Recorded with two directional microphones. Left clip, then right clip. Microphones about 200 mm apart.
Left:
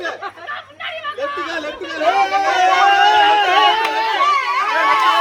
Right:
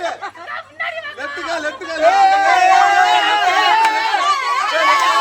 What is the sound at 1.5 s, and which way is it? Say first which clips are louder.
Chatter: right 2 dB; 30° right (ahead or behind).